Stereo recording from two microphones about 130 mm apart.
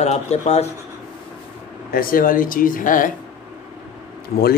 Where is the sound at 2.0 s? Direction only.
90° left.